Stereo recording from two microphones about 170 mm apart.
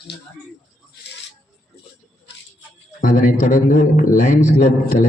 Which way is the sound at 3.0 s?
50° left (ahead or behind).